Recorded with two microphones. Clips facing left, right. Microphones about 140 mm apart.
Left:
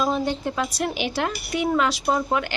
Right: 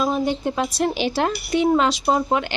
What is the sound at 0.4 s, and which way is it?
Speech, 25° right (ahead or behind).